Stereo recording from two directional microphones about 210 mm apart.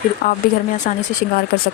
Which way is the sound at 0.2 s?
50° left (ahead or behind).